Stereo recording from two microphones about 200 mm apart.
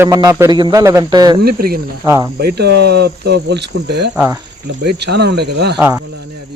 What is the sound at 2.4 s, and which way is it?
Speech, 55° right (ahead or behind).